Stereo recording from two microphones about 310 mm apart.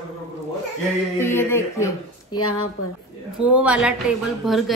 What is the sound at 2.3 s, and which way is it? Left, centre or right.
Speech, left.